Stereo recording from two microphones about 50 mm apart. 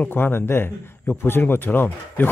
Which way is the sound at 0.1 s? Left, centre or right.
Left.